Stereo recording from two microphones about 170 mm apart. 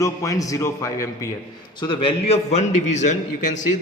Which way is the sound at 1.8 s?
30° left (ahead or behind).